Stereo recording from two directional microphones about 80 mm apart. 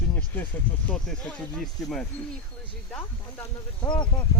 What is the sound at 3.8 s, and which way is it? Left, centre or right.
Speech, left.